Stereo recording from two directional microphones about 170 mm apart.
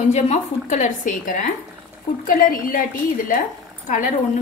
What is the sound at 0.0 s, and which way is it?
A woman's voice, 40° left (ahead or behind).